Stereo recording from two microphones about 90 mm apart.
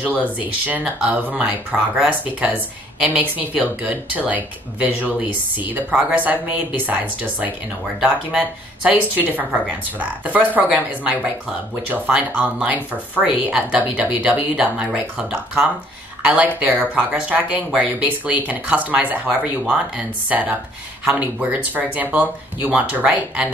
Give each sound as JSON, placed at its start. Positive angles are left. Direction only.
{"t": 0.0, "sound": "speech", "side_deg": -15}